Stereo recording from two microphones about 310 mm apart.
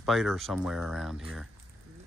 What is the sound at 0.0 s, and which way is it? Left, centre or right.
Speech, centre.